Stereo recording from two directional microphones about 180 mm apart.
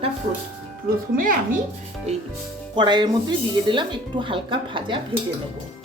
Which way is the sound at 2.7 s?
25° right (ahead or behind).